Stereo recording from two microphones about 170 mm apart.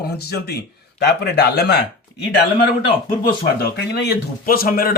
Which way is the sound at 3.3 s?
75° left (ahead or behind).